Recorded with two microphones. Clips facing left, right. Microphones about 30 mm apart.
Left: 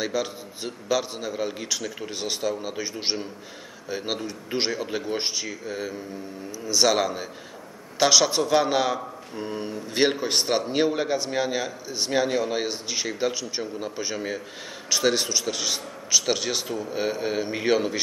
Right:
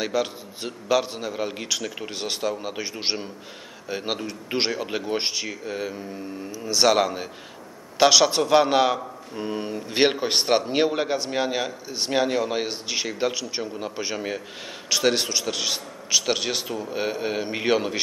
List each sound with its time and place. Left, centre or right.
0.0 s a man's voice: centre